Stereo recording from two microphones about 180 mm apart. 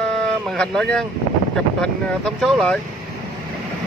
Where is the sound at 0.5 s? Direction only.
5° left (ahead or behind).